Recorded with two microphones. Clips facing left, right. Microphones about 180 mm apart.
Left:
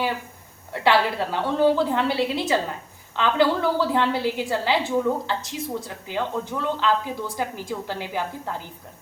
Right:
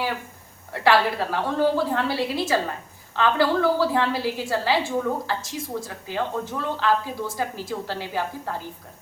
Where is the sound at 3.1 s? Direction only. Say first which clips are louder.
Even; 20° left (ahead or behind).